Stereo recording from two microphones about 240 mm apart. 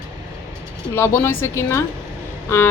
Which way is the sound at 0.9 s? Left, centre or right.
Centre.